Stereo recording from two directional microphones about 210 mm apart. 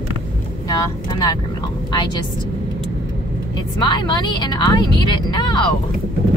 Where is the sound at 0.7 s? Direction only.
15° left (ahead or behind).